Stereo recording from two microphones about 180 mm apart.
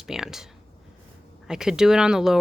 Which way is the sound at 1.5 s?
5° right (ahead or behind).